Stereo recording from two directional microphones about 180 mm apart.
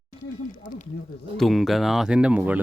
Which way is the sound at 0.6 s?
45° left (ahead or behind).